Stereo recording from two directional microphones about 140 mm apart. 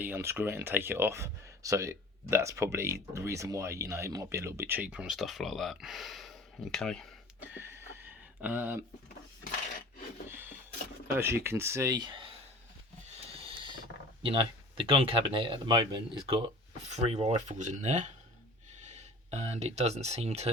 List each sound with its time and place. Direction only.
0.0 s speech: 15° right (ahead or behind); by 7.1 s 5° left (ahead or behind)
7.5 s a sound: 15° right (ahead or behind)
10.2 s rub: 15° right (ahead or behind)
11.1 s speech: 15° right (ahead or behind)
13.6 s speech: 35° right (ahead or behind)
16.9 s speech: 50° right (ahead or behind)